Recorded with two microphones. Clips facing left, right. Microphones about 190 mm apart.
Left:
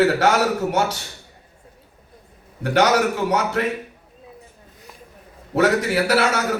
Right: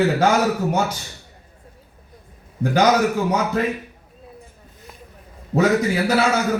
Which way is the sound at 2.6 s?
80° left.